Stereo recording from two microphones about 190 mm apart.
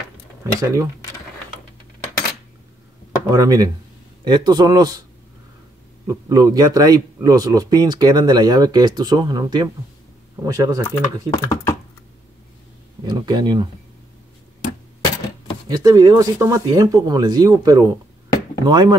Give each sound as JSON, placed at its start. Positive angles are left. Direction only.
{"t": 0.4, "sound": "speech", "side_deg": -15}
{"t": 3.3, "sound": "a man's voice", "side_deg": -20}
{"t": 6.0, "sound": "a man's voice", "side_deg": -20}
{"t": 11.2, "sound": "speech", "side_deg": 15}
{"t": 13.0, "sound": "a man's voice", "side_deg": -20}
{"t": 15.7, "sound": "a man's voice", "side_deg": -20}